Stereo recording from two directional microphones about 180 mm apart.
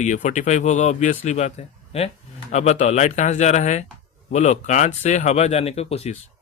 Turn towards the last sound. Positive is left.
turn(degrees=35)  # may be behind; listen again after turning